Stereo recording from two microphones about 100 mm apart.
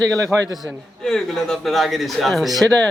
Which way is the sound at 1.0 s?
5° left (ahead or behind).